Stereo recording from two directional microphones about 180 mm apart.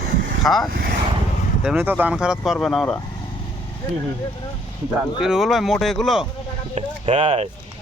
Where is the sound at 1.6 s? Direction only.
10° right (ahead or behind).